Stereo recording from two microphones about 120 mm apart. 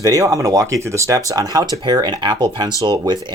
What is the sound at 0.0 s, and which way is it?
Speech, 30° right (ahead or behind).